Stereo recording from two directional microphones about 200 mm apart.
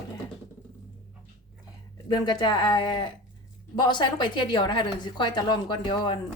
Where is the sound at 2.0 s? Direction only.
20° left (ahead or behind).